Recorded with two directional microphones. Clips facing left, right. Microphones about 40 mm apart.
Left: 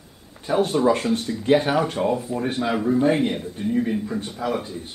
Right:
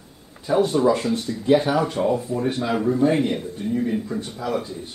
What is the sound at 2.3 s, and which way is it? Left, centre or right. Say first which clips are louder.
Speech: right 1 dB; centre.